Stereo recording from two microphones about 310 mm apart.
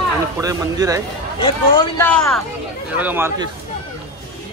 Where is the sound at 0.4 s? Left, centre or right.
Centre.